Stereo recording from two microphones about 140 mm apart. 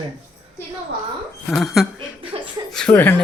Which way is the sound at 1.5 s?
Centre (ahead or behind).